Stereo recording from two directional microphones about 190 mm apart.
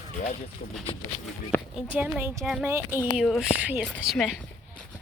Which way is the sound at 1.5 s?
10° left (ahead or behind).